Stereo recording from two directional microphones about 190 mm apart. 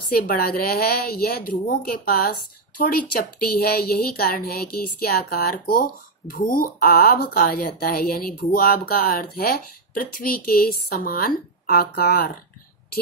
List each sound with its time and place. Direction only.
0.1 s speech: 50° left (ahead or behind)
9.9 s speech: 50° left (ahead or behind)